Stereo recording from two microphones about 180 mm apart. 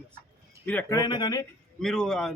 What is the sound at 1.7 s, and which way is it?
Speech, 5° left (ahead or behind).